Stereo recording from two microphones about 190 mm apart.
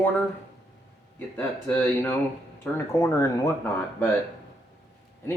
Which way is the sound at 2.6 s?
15° left (ahead or behind).